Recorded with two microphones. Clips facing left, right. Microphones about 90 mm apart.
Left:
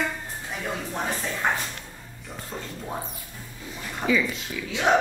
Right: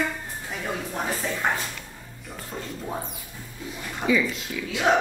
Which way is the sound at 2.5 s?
15° left (ahead or behind).